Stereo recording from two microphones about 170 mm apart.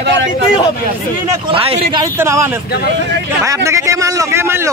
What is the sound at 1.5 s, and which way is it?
Speech, 35° right (ahead or behind).